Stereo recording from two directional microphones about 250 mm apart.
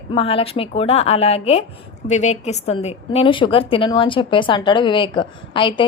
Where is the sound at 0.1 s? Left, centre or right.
Left.